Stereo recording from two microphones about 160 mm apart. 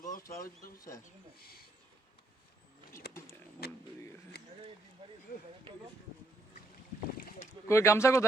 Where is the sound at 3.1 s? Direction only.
90° left.